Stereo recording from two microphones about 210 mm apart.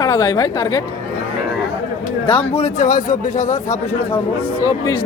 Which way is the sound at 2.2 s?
25° left (ahead or behind).